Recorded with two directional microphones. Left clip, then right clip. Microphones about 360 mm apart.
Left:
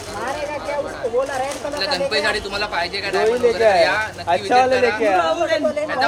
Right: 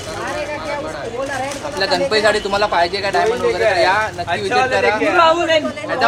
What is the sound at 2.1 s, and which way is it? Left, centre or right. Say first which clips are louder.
Speech: right 5 dB; centre.